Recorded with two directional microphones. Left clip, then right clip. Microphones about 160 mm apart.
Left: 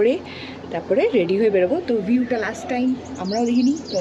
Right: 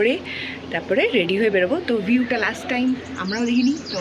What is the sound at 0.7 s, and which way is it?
A woman's voice, 10° left (ahead or behind).